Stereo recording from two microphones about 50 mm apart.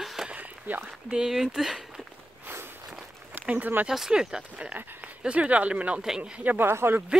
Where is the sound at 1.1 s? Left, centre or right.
Centre.